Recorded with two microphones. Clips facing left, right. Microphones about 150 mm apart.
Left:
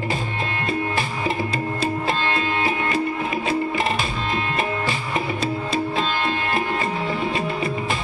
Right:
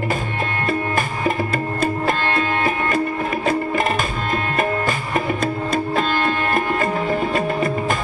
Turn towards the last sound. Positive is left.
turn(degrees=-50)  # may be behind; listen again after turning